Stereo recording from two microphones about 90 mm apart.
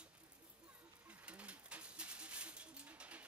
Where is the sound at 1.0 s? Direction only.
15° right (ahead or behind).